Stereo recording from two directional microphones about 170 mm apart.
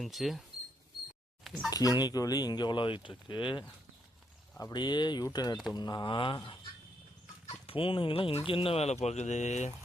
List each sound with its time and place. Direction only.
0.0 s speech: centre (ahead or behind)
1.7 s speech: 20° left (ahead or behind)
7.7 s speech: 30° left (ahead or behind)